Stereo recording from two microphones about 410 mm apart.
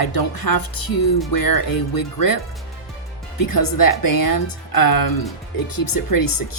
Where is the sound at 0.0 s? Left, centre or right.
Left.